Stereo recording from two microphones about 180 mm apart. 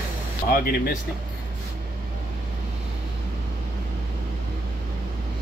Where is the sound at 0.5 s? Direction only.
55° left (ahead or behind).